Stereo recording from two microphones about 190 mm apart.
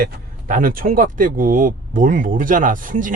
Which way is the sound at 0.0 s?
45° right (ahead or behind).